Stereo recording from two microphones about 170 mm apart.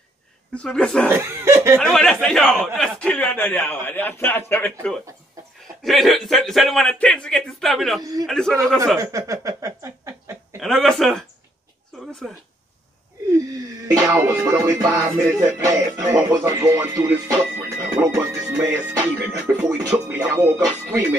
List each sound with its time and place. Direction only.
0.6 s a man's voice: 5° left (ahead or behind)
1.1 s music: 15° right (ahead or behind)
1.8 s a man's voice: 5° left (ahead or behind)
5.9 s speech: centre (ahead or behind)
8.0 s a man's voice: 20° right (ahead or behind)
8.3 s speech: 5° left (ahead or behind)
8.9 s speech: 20° right (ahead or behind)
10.6 s speech: centre (ahead or behind)
12.0 s a sound: 5° left (ahead or behind)
13.8 s music: 20° right (ahead or behind)